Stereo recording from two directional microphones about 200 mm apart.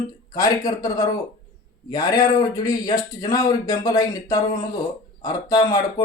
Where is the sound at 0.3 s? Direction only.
20° left (ahead or behind).